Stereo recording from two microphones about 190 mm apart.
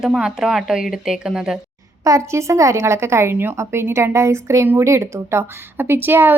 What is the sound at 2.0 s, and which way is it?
A woman's voice, 15° right (ahead or behind).